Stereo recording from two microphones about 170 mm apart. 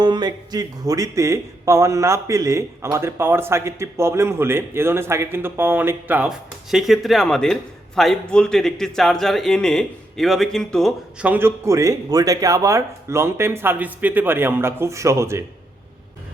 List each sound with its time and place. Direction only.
0.0 s speech: 25° right (ahead or behind); by 11.3 s centre (ahead or behind)
11.3 s speech: 15° right (ahead or behind)